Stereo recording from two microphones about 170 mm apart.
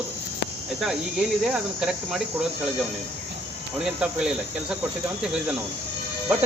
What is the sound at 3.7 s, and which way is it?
Speech, 5° right (ahead or behind).